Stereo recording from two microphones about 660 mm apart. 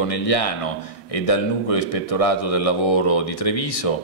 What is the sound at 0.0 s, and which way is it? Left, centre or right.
Speech, left.